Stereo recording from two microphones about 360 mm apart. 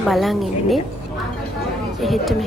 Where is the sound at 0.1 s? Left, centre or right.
Centre.